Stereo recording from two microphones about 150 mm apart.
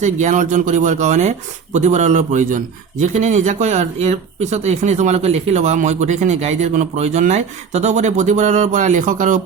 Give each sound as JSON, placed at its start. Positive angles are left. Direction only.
{"t": 0.0, "sound": "a man's voice", "side_deg": -55}